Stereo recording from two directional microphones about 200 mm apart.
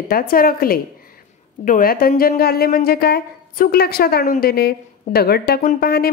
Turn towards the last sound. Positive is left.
turn(degrees=50)  # may be behind; listen again after turning